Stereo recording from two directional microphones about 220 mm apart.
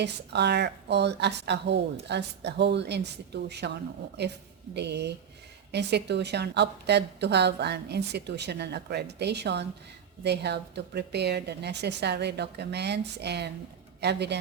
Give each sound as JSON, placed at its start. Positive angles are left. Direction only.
{"t": 0.0, "sound": "a woman's voice", "side_deg": -50}